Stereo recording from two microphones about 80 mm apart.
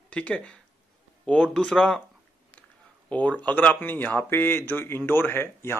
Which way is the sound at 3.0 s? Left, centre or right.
Centre.